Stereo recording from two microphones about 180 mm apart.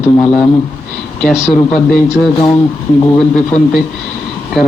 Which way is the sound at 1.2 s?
5° right (ahead or behind).